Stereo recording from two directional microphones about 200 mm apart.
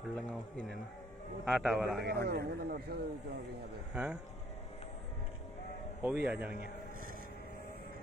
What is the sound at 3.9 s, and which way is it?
Speech, 5° right (ahead or behind).